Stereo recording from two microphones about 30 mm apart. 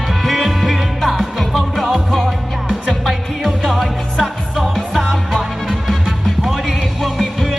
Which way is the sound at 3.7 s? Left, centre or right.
Centre.